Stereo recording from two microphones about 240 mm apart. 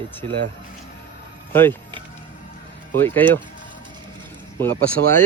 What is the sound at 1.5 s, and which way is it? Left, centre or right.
Speech, centre.